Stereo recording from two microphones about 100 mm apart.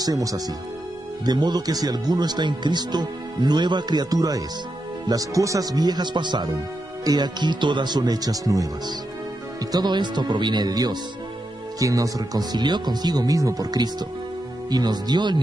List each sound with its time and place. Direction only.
0.0 s speech: 35° right (ahead or behind)